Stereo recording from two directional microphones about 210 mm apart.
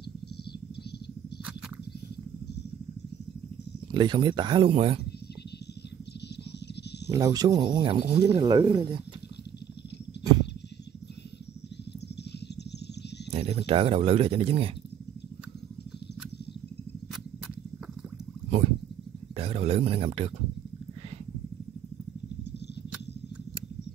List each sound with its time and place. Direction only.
3.9 s speech: 20° right (ahead or behind)
7.1 s speech: 15° right (ahead or behind)
13.3 s speech: 25° right (ahead or behind)
19.3 s a sound: 30° right (ahead or behind)